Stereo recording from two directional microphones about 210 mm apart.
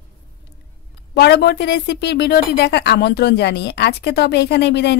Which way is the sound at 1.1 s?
50° left (ahead or behind).